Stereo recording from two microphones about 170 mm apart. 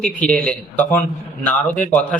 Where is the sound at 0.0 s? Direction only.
5° left (ahead or behind).